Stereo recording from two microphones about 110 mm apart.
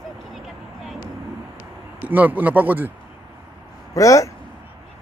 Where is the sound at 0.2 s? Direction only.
Centre (ahead or behind).